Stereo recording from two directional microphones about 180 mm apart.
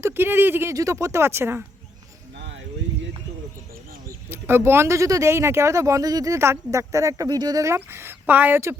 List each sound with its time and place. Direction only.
0.0 s speech: 10° right (ahead or behind)
4.3 s speech: 15° right (ahead or behind)